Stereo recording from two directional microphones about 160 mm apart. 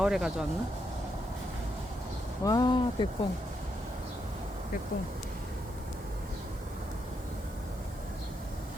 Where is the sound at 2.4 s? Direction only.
25° left (ahead or behind).